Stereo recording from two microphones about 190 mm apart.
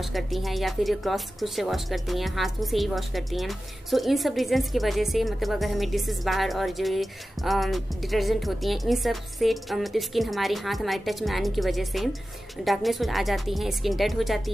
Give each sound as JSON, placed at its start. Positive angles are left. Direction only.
{"t": 0.0, "sound": "speech", "side_deg": 0}